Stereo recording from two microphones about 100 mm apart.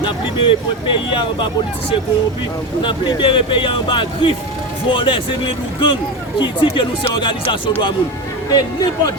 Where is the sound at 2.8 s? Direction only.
55° left (ahead or behind).